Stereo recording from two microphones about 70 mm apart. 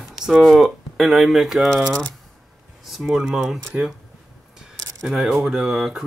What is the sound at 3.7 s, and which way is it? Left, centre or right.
Speech, centre.